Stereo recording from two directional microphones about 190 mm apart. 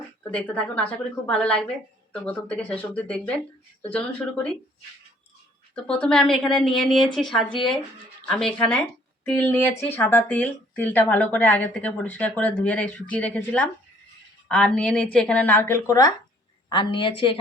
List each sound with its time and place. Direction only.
0.2 s a woman's voice: 5° left (ahead or behind)
5.7 s a woman's voice: 5° left (ahead or behind); by 17.3 s 25° left (ahead or behind)